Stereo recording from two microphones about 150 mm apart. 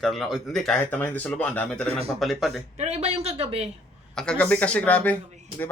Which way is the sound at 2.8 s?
45° right (ahead or behind).